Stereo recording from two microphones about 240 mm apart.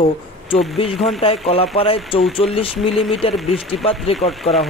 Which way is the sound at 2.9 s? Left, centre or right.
Centre.